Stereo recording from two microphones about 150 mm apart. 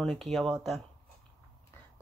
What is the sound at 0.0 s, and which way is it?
Speech, 5° left (ahead or behind).